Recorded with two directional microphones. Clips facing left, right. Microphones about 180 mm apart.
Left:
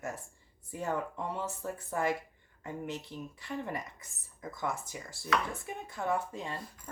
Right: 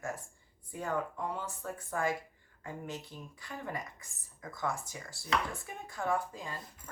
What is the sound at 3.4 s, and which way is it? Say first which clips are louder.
Speech: left 2 dB; 25° left (ahead or behind).